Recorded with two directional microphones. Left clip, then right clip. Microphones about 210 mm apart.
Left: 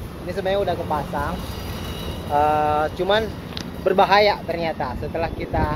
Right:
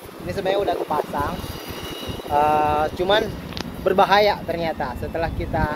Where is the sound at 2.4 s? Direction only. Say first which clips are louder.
Even; 20° right (ahead or behind).